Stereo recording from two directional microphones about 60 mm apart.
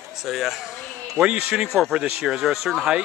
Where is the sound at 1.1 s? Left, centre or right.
Centre.